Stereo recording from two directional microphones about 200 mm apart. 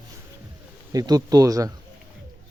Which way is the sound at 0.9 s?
20° right (ahead or behind).